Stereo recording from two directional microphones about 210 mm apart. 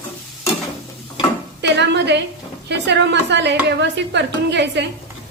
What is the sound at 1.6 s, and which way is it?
A woman's voice, 55° right (ahead or behind).